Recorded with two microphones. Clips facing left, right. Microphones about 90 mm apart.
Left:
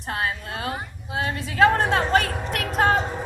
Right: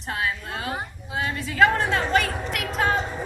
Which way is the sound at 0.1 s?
45° left (ahead or behind).